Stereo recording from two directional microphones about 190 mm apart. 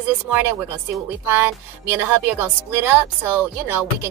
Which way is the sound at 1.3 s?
10° right (ahead or behind).